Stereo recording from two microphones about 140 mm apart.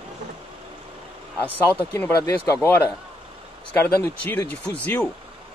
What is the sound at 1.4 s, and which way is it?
Speech, 10° left (ahead or behind).